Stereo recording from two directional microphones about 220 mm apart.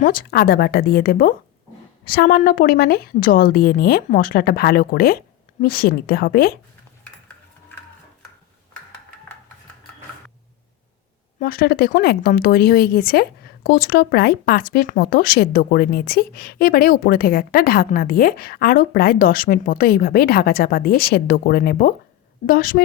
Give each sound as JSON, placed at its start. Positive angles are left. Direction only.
{"t": 0.0, "sound": "speech", "side_deg": 40}
{"t": 11.3, "sound": "a woman's voice", "side_deg": 40}